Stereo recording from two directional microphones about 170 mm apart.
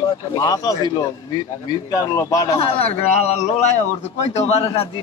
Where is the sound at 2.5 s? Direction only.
35° left (ahead or behind).